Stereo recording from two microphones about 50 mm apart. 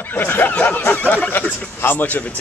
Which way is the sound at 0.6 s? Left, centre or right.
Left.